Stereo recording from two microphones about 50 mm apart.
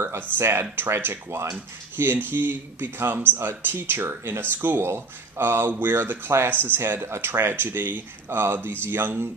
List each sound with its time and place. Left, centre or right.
0.0 s speech: right
2.0 s speech: right